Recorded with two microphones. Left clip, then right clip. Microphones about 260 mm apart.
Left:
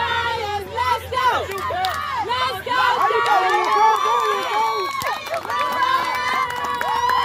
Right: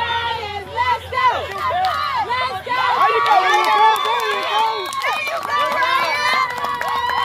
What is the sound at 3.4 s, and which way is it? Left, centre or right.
Run, right.